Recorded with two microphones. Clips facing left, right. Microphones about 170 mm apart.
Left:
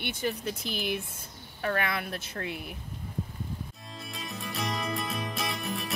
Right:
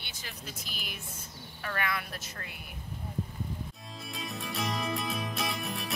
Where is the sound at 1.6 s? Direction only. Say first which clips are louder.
Left 5 dB; 50° left (ahead or behind).